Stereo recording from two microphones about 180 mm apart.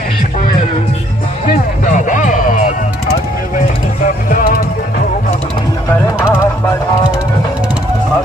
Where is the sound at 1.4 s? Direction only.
45° left (ahead or behind).